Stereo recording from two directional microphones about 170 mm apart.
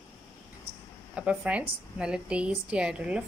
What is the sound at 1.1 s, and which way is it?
A woman's voice, 5° right (ahead or behind).